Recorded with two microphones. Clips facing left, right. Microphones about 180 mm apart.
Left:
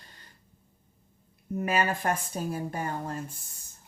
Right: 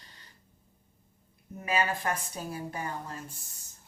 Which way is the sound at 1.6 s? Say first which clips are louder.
Left 2 dB; 50° left (ahead or behind).